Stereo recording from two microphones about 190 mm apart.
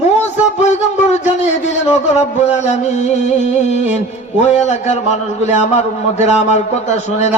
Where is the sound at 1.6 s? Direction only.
35° left (ahead or behind).